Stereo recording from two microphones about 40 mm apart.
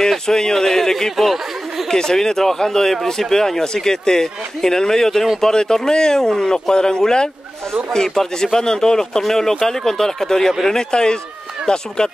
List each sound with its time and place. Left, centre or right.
0.0 s speech: centre
1.1 s speech: centre
1.9 s a man's voice: centre